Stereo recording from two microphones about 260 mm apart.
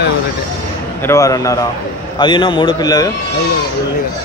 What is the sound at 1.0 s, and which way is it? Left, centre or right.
A man's voice, centre.